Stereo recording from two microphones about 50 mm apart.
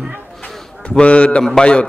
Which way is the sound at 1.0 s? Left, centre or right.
Left.